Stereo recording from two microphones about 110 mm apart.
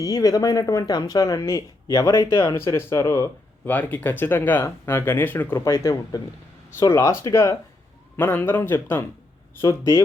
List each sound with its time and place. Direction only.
0.0 s speech: 35° left (ahead or behind)
3.7 s speech: 15° left (ahead or behind)